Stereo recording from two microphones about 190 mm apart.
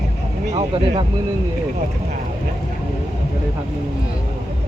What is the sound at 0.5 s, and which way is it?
Speech, 30° right (ahead or behind).